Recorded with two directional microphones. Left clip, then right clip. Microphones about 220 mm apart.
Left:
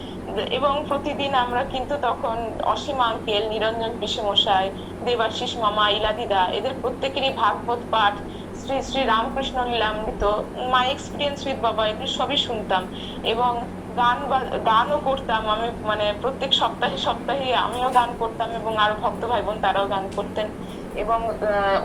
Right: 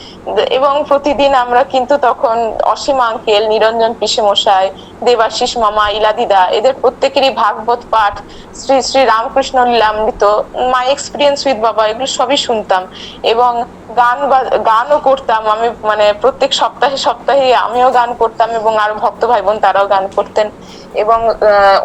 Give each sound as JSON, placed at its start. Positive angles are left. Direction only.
{"t": 0.3, "sound": "a woman's voice", "side_deg": -50}